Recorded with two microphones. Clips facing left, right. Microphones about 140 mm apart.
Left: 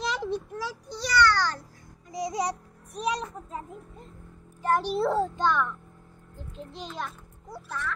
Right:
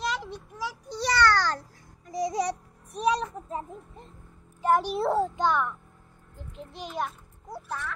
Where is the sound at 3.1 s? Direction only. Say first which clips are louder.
Right 4 dB; 30° right (ahead or behind).